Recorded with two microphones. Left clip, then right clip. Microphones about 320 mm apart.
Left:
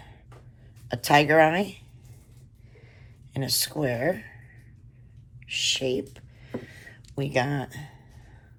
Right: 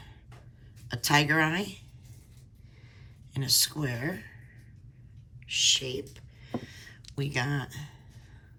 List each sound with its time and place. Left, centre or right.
0.9 s speech: centre
3.3 s speech: centre
5.5 s a sound: centre